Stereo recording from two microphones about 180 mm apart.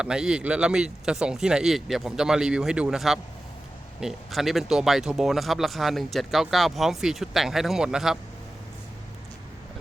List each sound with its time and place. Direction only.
0.0 s speech: 5° right (ahead or behind)